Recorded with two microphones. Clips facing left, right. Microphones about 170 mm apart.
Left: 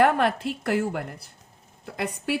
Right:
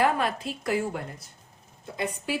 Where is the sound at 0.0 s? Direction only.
60° left (ahead or behind).